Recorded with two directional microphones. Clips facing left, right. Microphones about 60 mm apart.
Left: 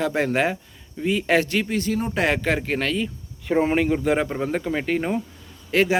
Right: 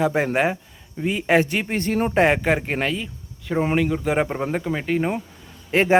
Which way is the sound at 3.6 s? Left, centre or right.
Centre.